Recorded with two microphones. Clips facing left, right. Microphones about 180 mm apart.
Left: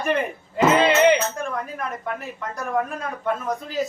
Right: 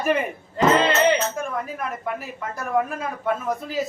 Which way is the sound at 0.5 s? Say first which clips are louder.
Left 1 dB; 10° left (ahead or behind).